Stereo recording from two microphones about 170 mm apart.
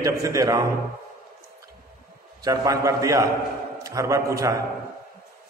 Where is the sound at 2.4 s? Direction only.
20° right (ahead or behind).